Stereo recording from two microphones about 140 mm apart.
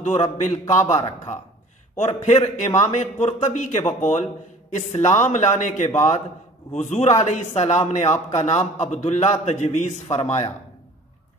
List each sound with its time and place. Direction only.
0.0 s a man's voice: 50° left (ahead or behind)